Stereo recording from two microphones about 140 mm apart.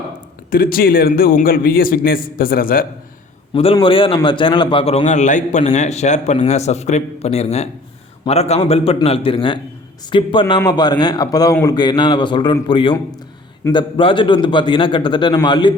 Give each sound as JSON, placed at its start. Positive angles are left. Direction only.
{"t": 0.5, "sound": "a man's voice", "side_deg": 90}
{"t": 3.5, "sound": "a man's voice", "side_deg": 40}